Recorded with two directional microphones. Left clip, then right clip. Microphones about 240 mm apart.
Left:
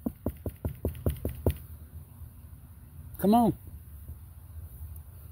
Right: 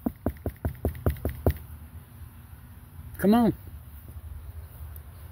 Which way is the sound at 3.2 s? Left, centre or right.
Centre.